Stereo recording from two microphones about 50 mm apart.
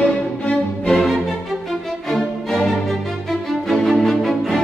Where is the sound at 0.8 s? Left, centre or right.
Centre.